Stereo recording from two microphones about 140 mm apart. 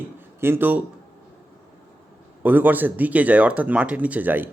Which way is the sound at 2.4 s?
10° right (ahead or behind).